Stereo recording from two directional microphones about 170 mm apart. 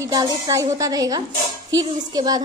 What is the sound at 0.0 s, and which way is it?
Speech, 20° right (ahead or behind).